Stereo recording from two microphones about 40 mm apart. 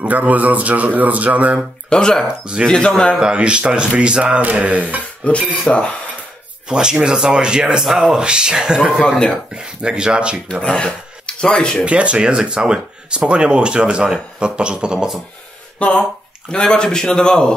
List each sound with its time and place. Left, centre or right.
0.0 s speech: right
1.9 s speech: centre
2.2 s speech: right
2.6 s speech: centre
3.3 s speech: right
4.4 s speech: right
5.2 s speech: left
6.7 s speech: right
10.5 s speech: left
11.8 s speech: right
15.8 s speech: left